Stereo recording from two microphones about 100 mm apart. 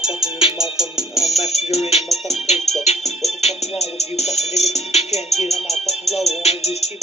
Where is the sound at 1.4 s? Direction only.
90° left.